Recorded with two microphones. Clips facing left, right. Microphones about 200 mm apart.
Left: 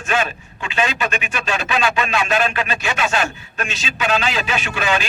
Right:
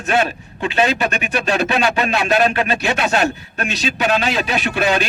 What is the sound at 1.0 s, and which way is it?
Speech, 40° right (ahead or behind).